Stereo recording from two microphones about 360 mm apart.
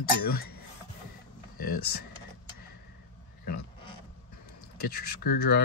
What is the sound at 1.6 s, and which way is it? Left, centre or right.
Speech, left.